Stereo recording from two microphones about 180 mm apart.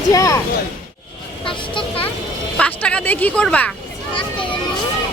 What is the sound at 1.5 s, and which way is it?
Speech, 30° left (ahead or behind).